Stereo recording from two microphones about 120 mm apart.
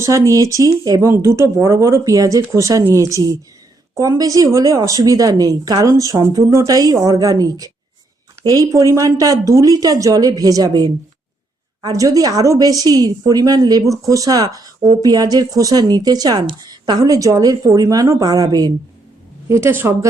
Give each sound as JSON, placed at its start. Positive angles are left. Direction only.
{"t": 0.0, "sound": "a woman's voice", "side_deg": -25}